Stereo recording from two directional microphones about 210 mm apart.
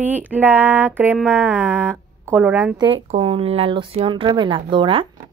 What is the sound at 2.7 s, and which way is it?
Speech, 25° right (ahead or behind).